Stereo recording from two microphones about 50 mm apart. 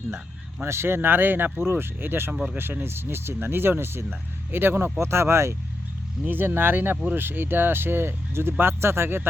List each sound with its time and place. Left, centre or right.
0.6 s speech: right
2.3 s speech: centre
2.6 s speech: right
4.9 s speech: right
6.2 s speech: right